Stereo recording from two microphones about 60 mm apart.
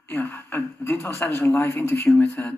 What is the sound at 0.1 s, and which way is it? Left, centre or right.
Speech, left.